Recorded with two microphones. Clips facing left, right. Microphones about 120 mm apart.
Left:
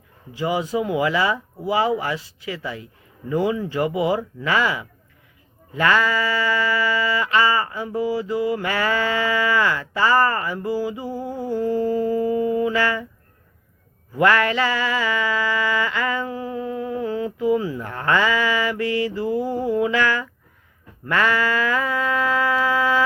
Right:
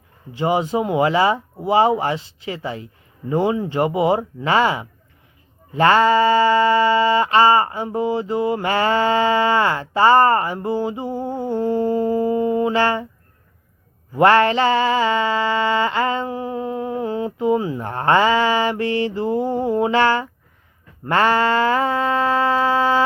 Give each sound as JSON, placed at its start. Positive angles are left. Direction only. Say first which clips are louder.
{"t": 0.3, "sound": "mantra", "louder": "right 3 dB", "side_deg": -30}
{"t": 14.2, "sound": "mantra", "louder": "right 4 dB", "side_deg": -30}
{"t": 21.0, "sound": "a sound", "louder": "right 4 dB", "side_deg": -30}